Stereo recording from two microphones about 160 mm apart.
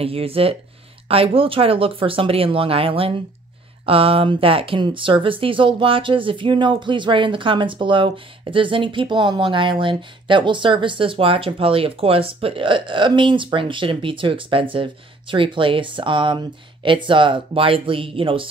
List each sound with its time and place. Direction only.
0.0 s speech: 35° right (ahead or behind)